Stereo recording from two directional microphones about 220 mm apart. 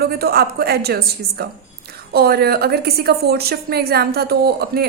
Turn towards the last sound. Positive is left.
turn(degrees=-45)  # may be behind; listen again after turning